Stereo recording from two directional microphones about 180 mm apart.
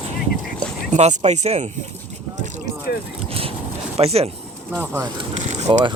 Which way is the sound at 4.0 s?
35° right (ahead or behind).